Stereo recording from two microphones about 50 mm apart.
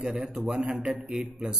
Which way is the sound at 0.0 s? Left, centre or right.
Centre.